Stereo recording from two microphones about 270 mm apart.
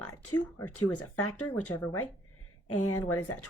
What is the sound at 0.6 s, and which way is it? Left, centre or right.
Speech, left.